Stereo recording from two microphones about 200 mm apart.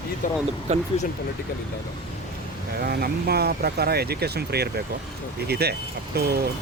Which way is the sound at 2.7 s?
50° right (ahead or behind).